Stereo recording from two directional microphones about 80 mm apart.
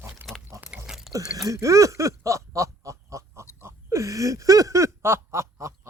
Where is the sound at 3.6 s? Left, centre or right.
Right.